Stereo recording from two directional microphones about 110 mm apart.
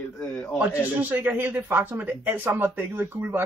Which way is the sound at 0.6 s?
15° right (ahead or behind).